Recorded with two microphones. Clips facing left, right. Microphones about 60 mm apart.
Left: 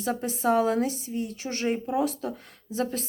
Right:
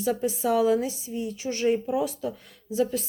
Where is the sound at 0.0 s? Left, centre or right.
Left.